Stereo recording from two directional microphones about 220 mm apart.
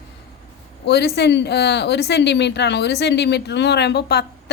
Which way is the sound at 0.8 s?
50° left (ahead or behind).